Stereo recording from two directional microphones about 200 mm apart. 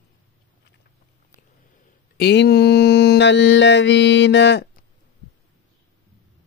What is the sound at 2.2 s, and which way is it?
Mantra, 55° left (ahead or behind).